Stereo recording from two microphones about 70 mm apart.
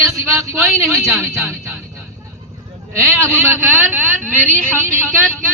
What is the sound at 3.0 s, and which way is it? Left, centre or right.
Speech, right.